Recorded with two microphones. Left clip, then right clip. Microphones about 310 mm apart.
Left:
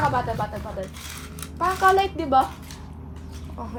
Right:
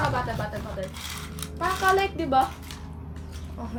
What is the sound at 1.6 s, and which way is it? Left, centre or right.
Speech, centre.